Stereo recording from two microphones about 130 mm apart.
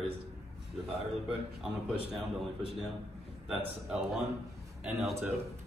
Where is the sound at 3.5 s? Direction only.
5° right (ahead or behind).